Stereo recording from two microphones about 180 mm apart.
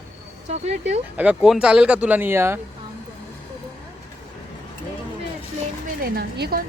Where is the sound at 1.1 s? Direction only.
10° right (ahead or behind).